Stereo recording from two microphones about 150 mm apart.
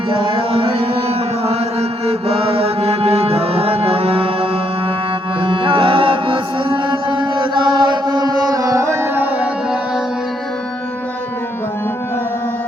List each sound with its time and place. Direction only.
0.5 s carnatic music: 40° right (ahead or behind)
5.4 s music: 35° right (ahead or behind); by 9.5 s 15° right (ahead or behind)